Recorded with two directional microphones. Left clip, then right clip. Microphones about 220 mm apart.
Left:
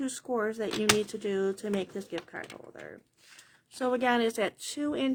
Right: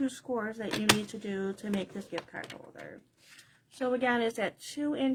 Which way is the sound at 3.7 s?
45° left (ahead or behind).